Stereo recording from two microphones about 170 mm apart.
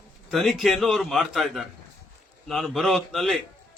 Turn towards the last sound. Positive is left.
turn(degrees=0)  # may be behind; listen again after turning